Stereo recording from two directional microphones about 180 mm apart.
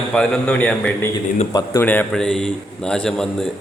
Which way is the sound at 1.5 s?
20° left (ahead or behind).